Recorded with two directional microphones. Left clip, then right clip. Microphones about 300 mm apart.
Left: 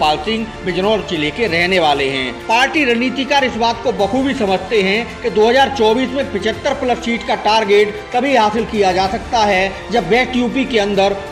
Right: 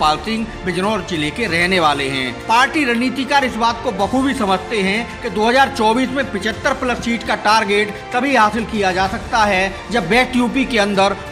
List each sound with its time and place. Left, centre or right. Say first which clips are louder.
0.1 s speech: left 2 dB; right